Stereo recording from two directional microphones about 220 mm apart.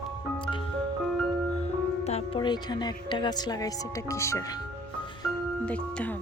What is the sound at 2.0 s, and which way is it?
Speech, 25° left (ahead or behind).